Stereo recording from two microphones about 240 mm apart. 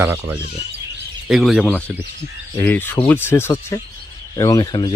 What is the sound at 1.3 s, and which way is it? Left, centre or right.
Speech, centre.